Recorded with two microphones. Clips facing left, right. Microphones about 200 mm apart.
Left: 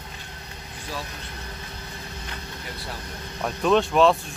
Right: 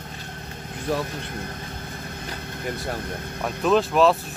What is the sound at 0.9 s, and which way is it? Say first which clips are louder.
Speech: right 9 dB; 55° right (ahead or behind).